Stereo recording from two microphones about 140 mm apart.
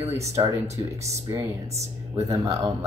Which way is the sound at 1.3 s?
30° right (ahead or behind).